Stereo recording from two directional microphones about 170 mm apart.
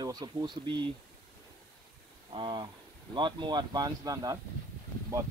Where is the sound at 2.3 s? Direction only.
30° right (ahead or behind).